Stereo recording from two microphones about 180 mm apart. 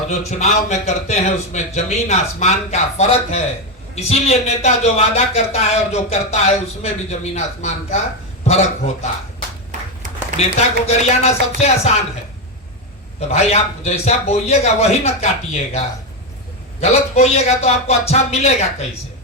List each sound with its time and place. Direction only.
0.1 s a man's voice: 35° left (ahead or behind)
10.3 s a man's voice: 35° left (ahead or behind)
13.1 s a man's voice: 35° left (ahead or behind)